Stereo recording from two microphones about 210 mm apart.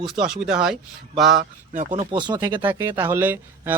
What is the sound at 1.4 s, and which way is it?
Speech, 35° right (ahead or behind).